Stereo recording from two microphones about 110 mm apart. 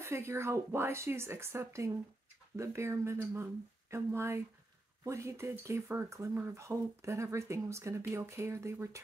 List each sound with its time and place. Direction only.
0.0 s speech: 25° right (ahead or behind)